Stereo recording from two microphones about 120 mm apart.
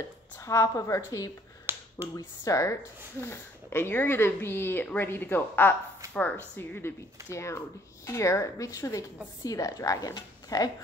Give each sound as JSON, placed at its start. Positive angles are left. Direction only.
{"t": 0.4, "sound": "speech", "side_deg": 25}
{"t": 1.7, "sound": "finger snapping", "side_deg": -20}
{"t": 2.1, "sound": "speech", "side_deg": 30}
{"t": 7.2, "sound": "speech", "side_deg": 25}